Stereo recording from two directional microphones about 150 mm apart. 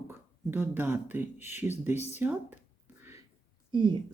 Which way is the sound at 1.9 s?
45° left (ahead or behind).